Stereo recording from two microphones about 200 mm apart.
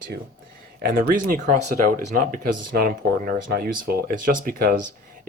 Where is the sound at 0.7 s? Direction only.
45° right (ahead or behind).